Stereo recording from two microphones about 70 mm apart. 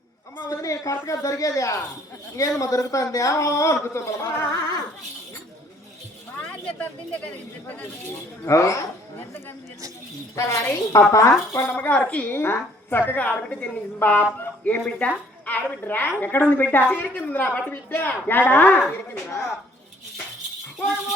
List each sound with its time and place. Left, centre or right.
0.6 s speech: left
6.5 s speech: centre
8.4 s speech: left
10.3 s speech: left
11.7 s a woman's voice: left
12.3 s a woman's voice: left